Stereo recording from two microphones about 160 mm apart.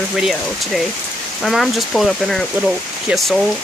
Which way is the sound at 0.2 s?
Centre (ahead or behind).